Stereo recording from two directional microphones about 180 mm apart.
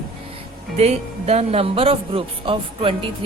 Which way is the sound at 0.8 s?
35° right (ahead or behind).